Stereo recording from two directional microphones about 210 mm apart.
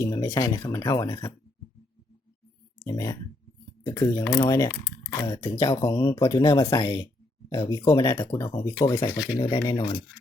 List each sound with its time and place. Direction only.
0.0 s speech: 15° left (ahead or behind)
2.8 s speech: 15° left (ahead or behind)